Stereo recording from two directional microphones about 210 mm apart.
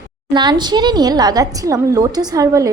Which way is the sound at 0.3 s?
20° right (ahead or behind).